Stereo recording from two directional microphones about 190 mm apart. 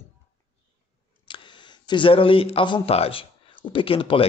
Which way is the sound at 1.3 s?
25° left (ahead or behind).